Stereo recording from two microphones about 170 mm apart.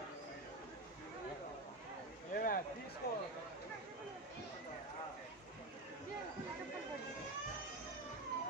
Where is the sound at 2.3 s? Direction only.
60° left (ahead or behind).